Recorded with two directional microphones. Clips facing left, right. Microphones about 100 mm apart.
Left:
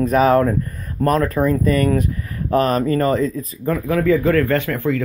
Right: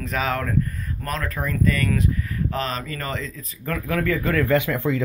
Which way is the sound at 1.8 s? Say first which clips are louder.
Left 5 dB; 50° left (ahead or behind).